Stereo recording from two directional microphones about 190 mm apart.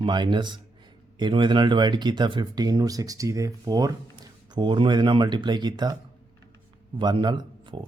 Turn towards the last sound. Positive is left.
turn(degrees=-25)  # may be behind; listen again after turning